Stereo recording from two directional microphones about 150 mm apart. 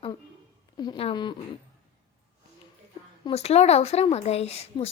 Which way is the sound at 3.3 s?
45° left (ahead or behind).